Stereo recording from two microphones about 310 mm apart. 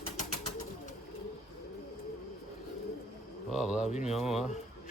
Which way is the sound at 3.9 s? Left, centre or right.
Left.